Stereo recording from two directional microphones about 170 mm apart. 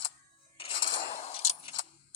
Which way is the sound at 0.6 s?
30° left (ahead or behind).